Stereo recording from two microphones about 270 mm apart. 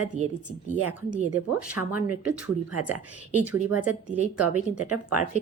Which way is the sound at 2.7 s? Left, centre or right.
Right.